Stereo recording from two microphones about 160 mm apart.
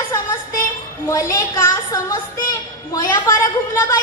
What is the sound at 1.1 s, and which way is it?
Speech, 20° left (ahead or behind).